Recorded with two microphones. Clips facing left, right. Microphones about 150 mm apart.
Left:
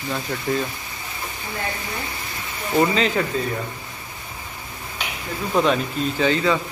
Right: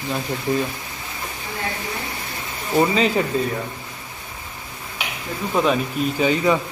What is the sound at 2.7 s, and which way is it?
Speech, 5° right (ahead or behind).